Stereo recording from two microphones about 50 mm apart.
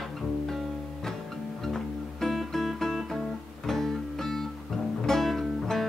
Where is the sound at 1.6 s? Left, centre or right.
Centre.